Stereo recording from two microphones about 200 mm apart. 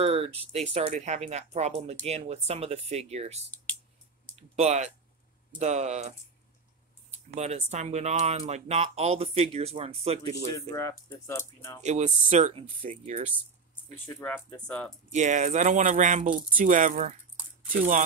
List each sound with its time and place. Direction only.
0.0 s speech: 30° right (ahead or behind)
7.3 s speech: 35° right (ahead or behind)
10.5 s speech: 15° left (ahead or behind)
11.8 s speech: 35° right (ahead or behind)
14.0 s speech: 10° left (ahead or behind)
15.0 s speech: 35° right (ahead or behind)